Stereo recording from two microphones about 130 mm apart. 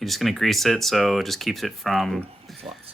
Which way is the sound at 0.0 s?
Centre (ahead or behind).